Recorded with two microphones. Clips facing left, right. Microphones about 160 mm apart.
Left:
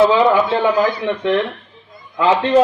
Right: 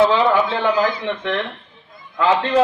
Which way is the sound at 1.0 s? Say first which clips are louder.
Left 5 dB; 10° left (ahead or behind).